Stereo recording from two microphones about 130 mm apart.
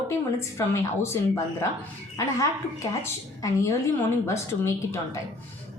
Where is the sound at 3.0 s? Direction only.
25° left (ahead or behind).